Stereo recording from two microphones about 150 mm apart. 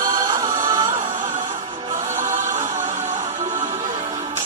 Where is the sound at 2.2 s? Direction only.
55° right (ahead or behind).